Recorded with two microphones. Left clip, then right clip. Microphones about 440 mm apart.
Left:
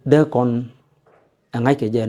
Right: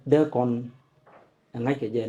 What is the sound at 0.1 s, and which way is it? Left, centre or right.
Speech, left.